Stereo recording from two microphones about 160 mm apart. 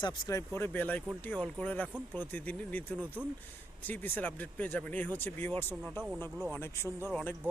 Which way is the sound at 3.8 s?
10° left (ahead or behind).